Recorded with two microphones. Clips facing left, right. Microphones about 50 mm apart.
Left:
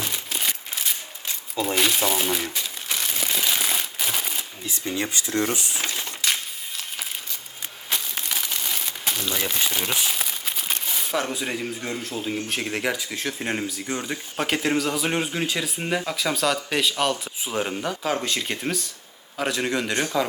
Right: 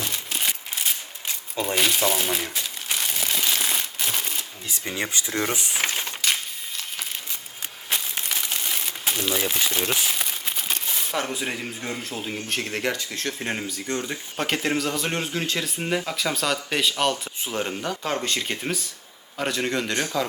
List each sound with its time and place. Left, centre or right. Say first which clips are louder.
0.0 s a sound: even; centre
1.6 s speech: even; centre
2.0 s crumpling: even; centre
4.9 s speech: left 1 dB; right
6.2 s a sound: left 1 dB; centre
7.9 s a sound: even; centre
8.5 s crumpling: even; centre
9.3 s speech: right 3 dB; centre
9.6 s speech: right 1 dB; centre
10.0 s crumpling: even; centre
12.5 s speech: right 2 dB; centre